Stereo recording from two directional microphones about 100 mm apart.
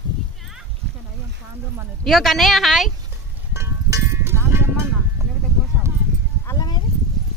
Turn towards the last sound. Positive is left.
turn(degrees=35)  # may be behind; listen again after turning